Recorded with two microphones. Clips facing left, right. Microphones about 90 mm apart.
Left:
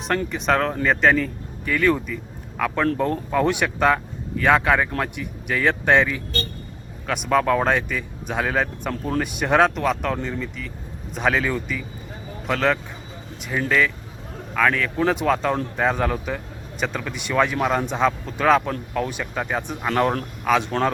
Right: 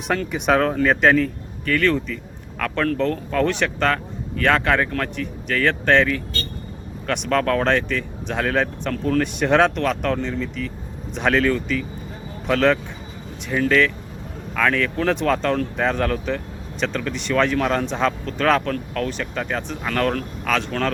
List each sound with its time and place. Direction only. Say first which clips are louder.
0.3 s speech: right 5 dB; 5° right (ahead or behind); by 20.7 s 15° left (ahead or behind)
20.7 s speech: left 2 dB; 25° left (ahead or behind)